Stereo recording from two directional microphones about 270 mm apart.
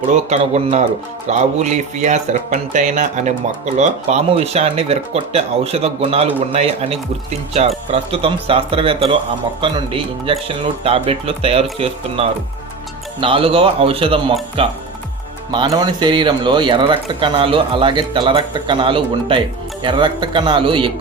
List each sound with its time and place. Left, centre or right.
0.1 s speech: right